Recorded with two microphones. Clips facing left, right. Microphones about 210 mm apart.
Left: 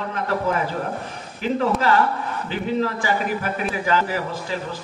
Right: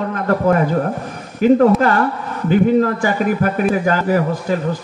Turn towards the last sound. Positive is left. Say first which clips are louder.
# right 10 dB
turn(degrees=-50)  # may be behind; listen again after turning